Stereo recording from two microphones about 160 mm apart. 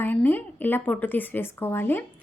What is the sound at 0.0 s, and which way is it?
A woman's voice, 10° left (ahead or behind).